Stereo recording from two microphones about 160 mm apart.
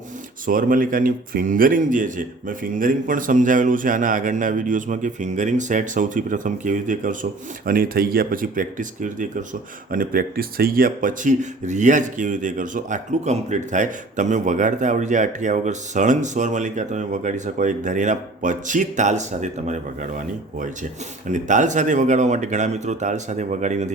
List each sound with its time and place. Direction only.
0.4 s speech: 60° right (ahead or behind)
9.9 s speech: 65° right (ahead or behind); by 20.1 s 50° right (ahead or behind)
21.2 s speech: 50° right (ahead or behind)